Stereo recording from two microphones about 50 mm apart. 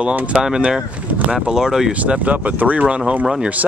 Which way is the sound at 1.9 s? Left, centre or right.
Right.